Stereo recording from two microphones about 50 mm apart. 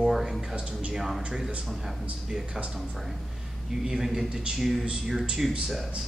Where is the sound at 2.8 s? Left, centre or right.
Centre.